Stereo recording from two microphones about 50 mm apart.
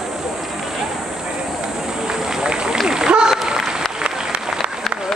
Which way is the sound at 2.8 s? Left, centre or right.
Centre.